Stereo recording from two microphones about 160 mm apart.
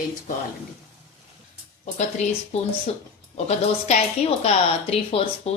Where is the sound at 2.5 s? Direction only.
40° left (ahead or behind).